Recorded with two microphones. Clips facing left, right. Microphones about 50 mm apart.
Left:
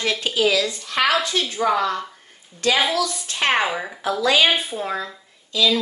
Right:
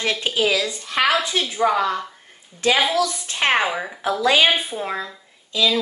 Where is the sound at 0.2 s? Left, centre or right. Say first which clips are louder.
Left 3 dB; centre.